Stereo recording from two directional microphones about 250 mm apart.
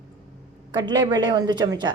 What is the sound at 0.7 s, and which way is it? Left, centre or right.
Speech, centre.